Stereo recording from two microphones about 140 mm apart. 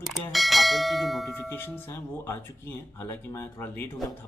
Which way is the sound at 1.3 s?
15° left (ahead or behind).